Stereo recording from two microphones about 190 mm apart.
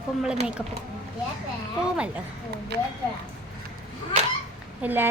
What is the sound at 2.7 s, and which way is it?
Speech, 60° right (ahead or behind).